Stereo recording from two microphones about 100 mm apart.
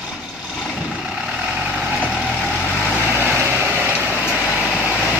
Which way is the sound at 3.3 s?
20° right (ahead or behind).